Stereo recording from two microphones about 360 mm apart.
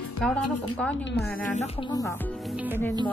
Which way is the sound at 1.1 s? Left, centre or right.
Centre.